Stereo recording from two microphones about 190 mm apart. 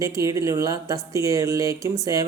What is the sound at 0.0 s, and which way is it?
Speech, 15° right (ahead or behind).